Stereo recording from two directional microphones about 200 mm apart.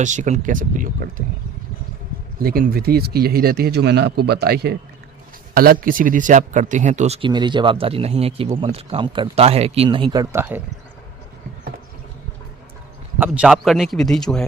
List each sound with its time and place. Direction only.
0.0 s speech: 40° right (ahead or behind)
2.4 s speech: 45° right (ahead or behind); by 10.6 s 15° right (ahead or behind)
13.1 s a man's voice: 10° right (ahead or behind)